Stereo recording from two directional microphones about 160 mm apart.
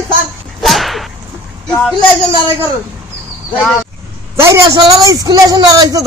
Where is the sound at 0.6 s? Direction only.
Centre (ahead or behind).